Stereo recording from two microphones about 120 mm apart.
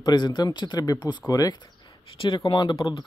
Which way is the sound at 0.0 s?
35° left (ahead or behind).